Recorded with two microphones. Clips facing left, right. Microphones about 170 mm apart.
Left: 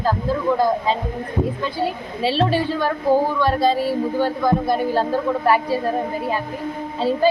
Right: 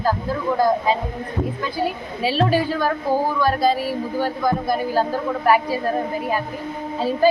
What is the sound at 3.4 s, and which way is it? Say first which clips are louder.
Speech: left 1 dB; 25° left (ahead or behind).